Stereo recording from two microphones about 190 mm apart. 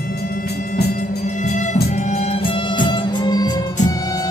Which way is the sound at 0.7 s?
45° left (ahead or behind).